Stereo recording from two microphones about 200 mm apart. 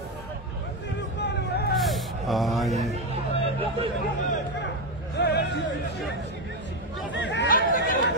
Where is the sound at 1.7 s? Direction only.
Centre (ahead or behind).